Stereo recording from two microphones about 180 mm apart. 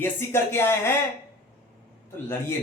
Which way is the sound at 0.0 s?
15° left (ahead or behind).